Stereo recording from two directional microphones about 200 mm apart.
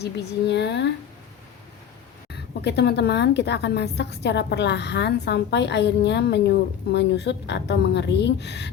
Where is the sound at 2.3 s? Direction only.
55° left (ahead or behind).